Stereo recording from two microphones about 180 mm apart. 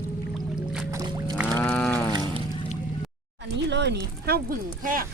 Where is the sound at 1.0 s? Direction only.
25° right (ahead or behind).